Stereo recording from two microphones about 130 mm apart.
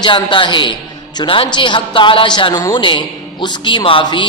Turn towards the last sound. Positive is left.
turn(degrees=40)  # may be behind; listen again after turning